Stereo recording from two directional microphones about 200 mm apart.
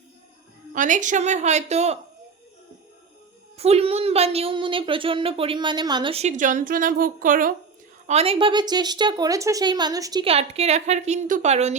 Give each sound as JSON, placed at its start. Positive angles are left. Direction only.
{"t": 0.7, "sound": "a woman's voice", "side_deg": -40}
{"t": 3.6, "sound": "a woman's voice", "side_deg": -30}
{"t": 8.0, "sound": "a woman's voice", "side_deg": -30}